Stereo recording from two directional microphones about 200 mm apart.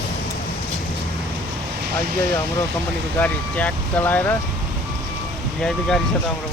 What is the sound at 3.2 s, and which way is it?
Speech, 10° left (ahead or behind).